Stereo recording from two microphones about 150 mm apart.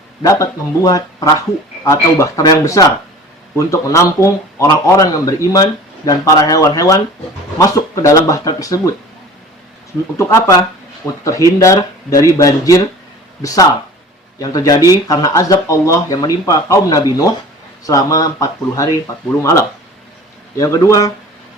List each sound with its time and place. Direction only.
0.2 s speech: 20° left (ahead or behind)
10.2 s speech: 20° left (ahead or behind)